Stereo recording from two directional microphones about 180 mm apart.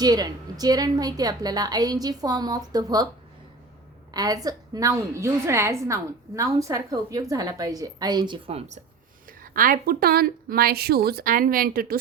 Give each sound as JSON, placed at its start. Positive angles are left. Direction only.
{"t": 0.0, "sound": "a woman's voice", "side_deg": -20}
{"t": 4.1, "sound": "a woman's voice", "side_deg": -20}
{"t": 9.4, "sound": "a woman's voice", "side_deg": -50}